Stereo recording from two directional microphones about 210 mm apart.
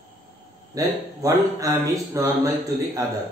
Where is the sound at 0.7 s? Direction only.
15° right (ahead or behind).